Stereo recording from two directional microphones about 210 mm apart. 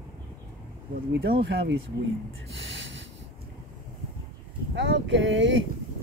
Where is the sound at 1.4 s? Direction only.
55° right (ahead or behind).